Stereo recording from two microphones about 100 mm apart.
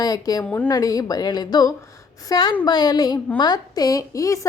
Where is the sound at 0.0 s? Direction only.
40° left (ahead or behind).